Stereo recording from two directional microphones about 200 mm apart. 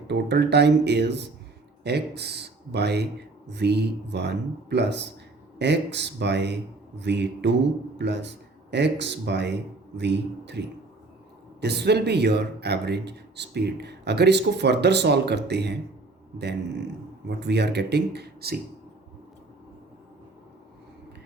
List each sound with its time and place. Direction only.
0.1 s speech: 55° right (ahead or behind)
11.6 s speech: 55° right (ahead or behind)
17.2 s speech: 55° right (ahead or behind)